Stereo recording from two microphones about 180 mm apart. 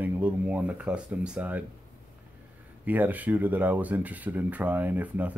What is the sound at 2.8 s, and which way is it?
Speech, 10° right (ahead or behind).